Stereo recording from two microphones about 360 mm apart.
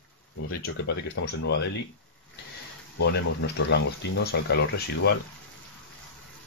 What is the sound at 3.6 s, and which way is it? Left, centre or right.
Speech, left.